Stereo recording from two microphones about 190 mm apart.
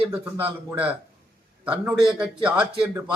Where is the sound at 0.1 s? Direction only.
10° right (ahead or behind).